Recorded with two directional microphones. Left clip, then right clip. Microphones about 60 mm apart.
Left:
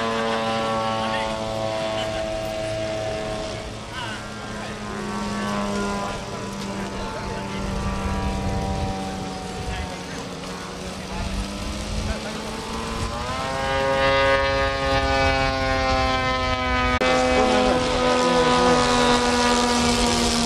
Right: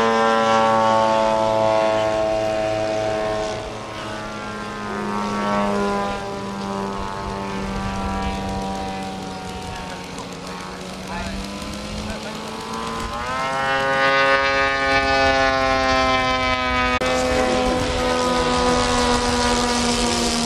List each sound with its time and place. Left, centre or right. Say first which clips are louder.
0.0 s vehicle: right 7 dB; right
5.4 s vehicle: right 6 dB; right
13.4 s a sound: right 3 dB; right
17.0 s vehicle: left 1 dB; centre